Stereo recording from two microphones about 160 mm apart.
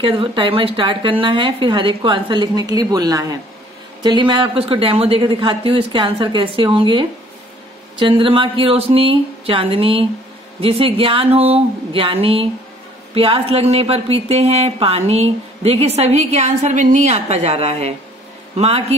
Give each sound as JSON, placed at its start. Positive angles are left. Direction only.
{"t": 0.0, "sound": "a woman's voice", "side_deg": -35}